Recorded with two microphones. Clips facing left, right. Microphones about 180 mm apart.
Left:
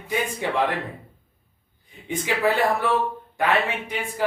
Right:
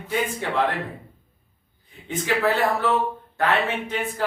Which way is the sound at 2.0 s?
15° left (ahead or behind).